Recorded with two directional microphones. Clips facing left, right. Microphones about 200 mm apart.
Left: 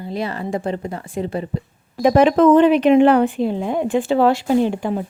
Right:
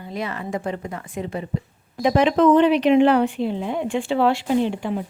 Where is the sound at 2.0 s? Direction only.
50° left (ahead or behind).